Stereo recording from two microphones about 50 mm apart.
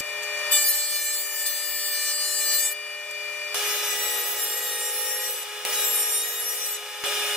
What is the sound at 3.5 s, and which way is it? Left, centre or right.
Wood, centre.